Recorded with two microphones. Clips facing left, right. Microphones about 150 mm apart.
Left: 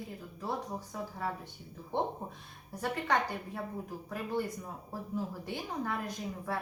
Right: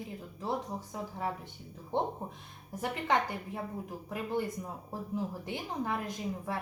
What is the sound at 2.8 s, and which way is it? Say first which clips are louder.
A woman's voice: right 1 dB; 20° right (ahead or behind).